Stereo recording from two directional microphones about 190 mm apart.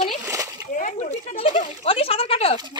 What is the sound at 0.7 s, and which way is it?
Speech, 40° left (ahead or behind).